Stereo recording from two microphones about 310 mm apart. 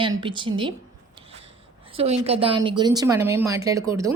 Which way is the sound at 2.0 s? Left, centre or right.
Centre.